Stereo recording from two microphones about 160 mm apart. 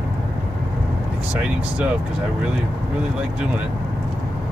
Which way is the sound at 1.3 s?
5° right (ahead or behind).